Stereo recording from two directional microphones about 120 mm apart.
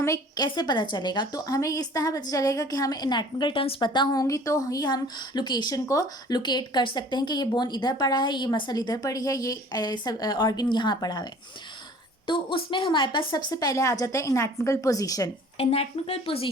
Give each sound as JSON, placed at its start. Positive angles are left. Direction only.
{"t": 0.0, "sound": "a woman's voice", "side_deg": 30}
{"t": 15.5, "sound": "speech", "side_deg": 55}